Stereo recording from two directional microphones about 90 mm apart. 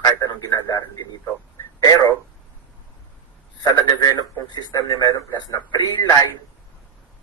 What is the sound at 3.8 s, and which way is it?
Radio, 50° left (ahead or behind).